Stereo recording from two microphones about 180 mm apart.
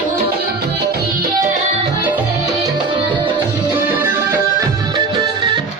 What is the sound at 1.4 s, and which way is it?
Music, 45° right (ahead or behind).